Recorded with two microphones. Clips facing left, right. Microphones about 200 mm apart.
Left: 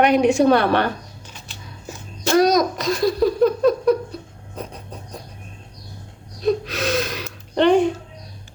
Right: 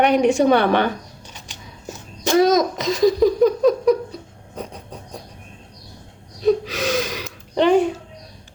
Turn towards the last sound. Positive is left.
turn(degrees=-5)  # may be behind; listen again after turning